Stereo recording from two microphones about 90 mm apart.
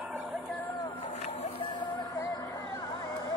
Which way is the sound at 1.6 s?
55° left (ahead or behind).